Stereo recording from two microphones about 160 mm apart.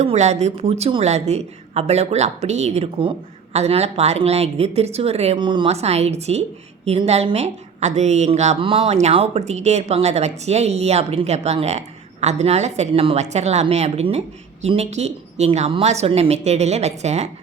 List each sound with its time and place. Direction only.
0.0 s a woman's voice: 45° right (ahead or behind)